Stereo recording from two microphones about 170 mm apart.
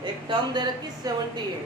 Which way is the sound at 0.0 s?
25° right (ahead or behind).